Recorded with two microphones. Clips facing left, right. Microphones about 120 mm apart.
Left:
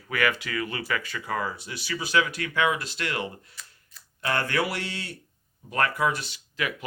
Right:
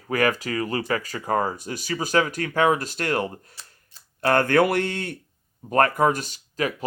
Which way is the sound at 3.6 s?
35° right (ahead or behind).